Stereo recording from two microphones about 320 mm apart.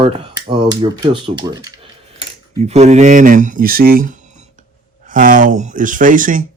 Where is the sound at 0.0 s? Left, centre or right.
Centre.